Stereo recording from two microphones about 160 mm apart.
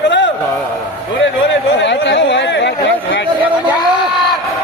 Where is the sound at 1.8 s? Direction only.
90° left.